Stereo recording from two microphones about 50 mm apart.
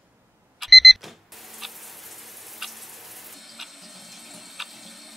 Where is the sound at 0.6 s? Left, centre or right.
Centre.